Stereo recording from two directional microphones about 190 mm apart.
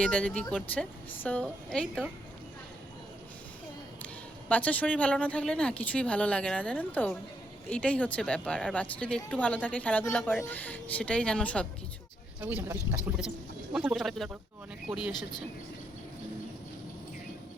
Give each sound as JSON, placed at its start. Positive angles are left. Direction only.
{"t": 0.0, "sound": "speech", "side_deg": 5}
{"t": 4.4, "sound": "speech", "side_deg": 10}
{"t": 12.4, "sound": "speech", "side_deg": -10}